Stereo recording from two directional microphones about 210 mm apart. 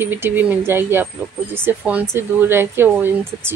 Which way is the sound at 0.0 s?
10° right (ahead or behind).